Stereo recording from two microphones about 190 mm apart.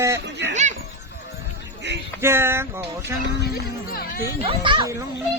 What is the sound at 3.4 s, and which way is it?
Speech, 55° left (ahead or behind).